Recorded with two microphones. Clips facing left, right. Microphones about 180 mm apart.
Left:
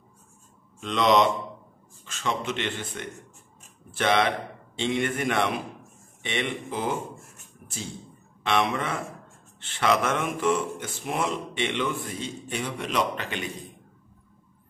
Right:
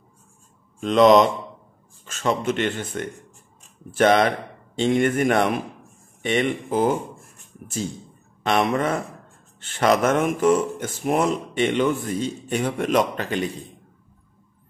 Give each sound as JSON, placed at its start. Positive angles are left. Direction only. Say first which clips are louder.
{"t": 0.7, "sound": "speech", "louder": "right 7 dB", "side_deg": -45}
{"t": 8.5, "sound": "speech", "louder": "right 5 dB", "side_deg": -45}